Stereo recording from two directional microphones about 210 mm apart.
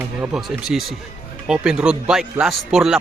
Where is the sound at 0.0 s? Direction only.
5° right (ahead or behind).